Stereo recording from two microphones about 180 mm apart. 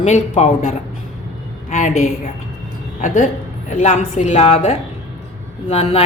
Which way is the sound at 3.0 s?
45° left (ahead or behind).